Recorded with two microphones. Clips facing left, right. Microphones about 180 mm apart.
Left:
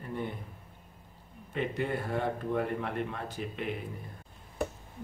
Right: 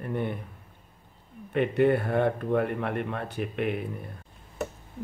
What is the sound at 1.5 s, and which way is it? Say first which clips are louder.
Speech: right 10 dB; 65° right (ahead or behind).